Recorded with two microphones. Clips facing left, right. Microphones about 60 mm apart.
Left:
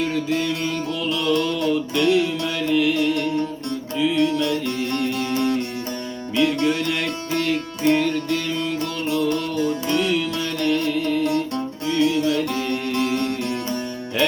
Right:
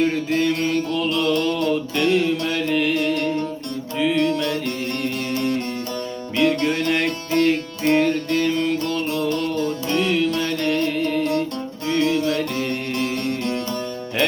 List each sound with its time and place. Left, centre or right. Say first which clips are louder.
0.0 s music: right 3 dB; right
6.3 s music: even; right
9.3 s music: even; centre
9.9 s music: right 5 dB; right